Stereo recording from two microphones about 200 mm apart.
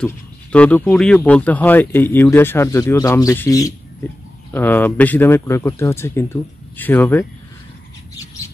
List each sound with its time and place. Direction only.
0.0 s speech: 5° left (ahead or behind)